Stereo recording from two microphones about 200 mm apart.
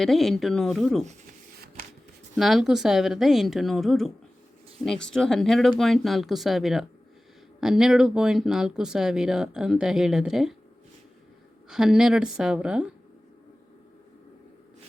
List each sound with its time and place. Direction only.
0.0 s speech: centre (ahead or behind)
1.5 s shuffling cards: 50° right (ahead or behind)
2.3 s speech: centre (ahead or behind)
11.7 s speech: 5° right (ahead or behind)